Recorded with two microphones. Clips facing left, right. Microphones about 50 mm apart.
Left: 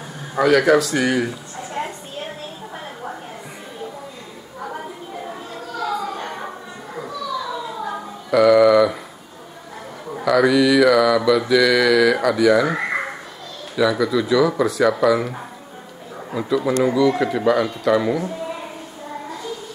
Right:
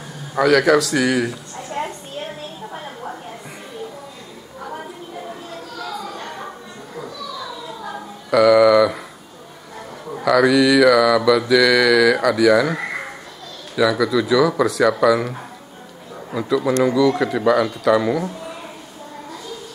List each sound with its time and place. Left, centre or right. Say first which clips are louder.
0.4 s speech: even; centre
5.8 s children playing: left 6 dB; centre
8.3 s a sound: right 1 dB; centre
10.1 s mantra: right 1 dB; centre
13.7 s speech: right 1 dB; centre